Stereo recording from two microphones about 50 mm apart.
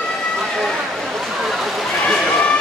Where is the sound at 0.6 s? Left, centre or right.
Centre.